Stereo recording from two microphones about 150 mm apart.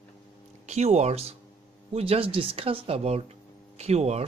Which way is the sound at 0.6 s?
45° right (ahead or behind).